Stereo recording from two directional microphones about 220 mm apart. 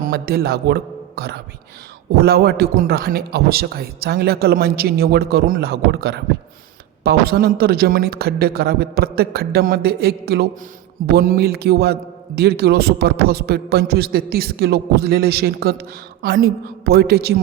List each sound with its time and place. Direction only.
0.0 s a man's voice: 45° right (ahead or behind)